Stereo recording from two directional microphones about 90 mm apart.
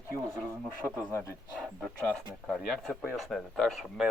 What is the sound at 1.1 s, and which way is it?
Speech, 35° left (ahead or behind).